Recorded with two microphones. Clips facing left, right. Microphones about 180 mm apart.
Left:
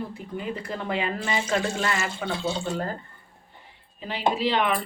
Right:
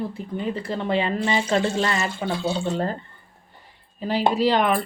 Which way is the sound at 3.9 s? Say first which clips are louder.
Right 5 dB; 40° right (ahead or behind).